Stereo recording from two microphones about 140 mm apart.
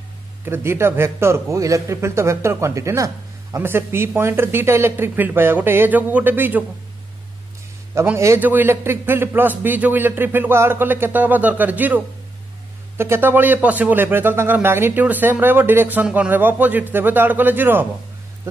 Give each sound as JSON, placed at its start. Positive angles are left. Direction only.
{"t": 0.5, "sound": "a man's voice", "side_deg": -20}
{"t": 7.9, "sound": "speech", "side_deg": -15}